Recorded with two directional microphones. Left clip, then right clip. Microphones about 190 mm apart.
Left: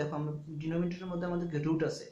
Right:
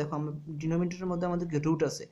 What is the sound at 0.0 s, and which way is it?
A man's voice, 45° right (ahead or behind).